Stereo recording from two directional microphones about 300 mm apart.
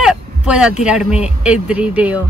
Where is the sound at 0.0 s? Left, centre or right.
Centre.